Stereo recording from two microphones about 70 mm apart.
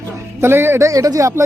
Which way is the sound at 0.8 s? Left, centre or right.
Right.